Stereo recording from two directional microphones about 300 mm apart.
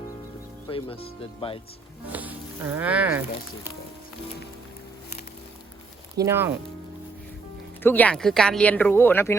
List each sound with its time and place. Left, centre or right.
0.7 s speech: centre
2.1 s speech: centre
6.2 s speech: centre
7.8 s speech: centre